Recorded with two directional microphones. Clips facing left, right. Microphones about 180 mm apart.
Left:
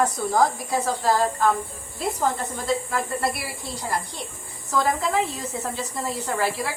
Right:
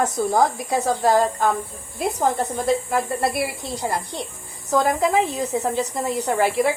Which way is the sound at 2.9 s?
20° right (ahead or behind).